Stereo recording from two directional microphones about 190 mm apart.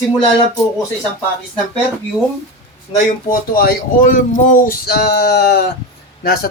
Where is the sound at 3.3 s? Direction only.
50° left (ahead or behind).